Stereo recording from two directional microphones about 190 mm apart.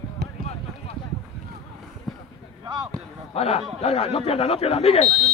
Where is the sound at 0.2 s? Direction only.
55° right (ahead or behind).